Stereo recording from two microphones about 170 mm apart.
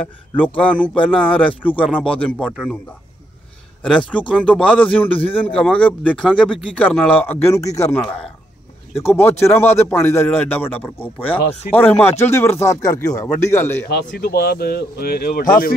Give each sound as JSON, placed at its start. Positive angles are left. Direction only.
{"t": 0.4, "sound": "speech", "side_deg": 5}
{"t": 4.3, "sound": "speech", "side_deg": 5}
{"t": 13.8, "sound": "speech", "side_deg": 70}